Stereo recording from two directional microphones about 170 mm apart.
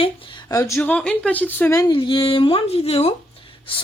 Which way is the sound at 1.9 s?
30° left (ahead or behind).